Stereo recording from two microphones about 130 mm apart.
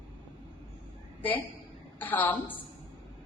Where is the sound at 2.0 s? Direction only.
15° left (ahead or behind).